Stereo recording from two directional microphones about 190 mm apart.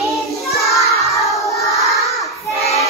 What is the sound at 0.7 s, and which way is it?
Child singing, centre (ahead or behind).